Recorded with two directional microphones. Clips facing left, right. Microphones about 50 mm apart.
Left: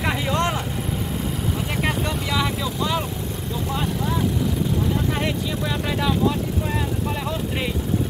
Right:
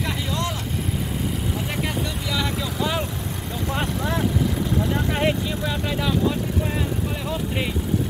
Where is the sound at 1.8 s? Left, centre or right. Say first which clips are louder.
Left 3 dB; left.